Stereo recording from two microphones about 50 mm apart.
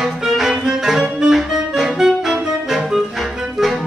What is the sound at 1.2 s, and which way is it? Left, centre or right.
Saxophone, centre.